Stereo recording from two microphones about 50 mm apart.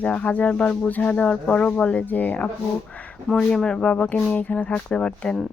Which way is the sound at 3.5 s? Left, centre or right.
Centre.